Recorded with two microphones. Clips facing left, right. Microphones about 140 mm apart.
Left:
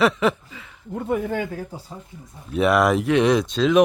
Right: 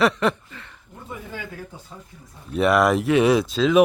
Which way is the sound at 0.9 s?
60° left (ahead or behind).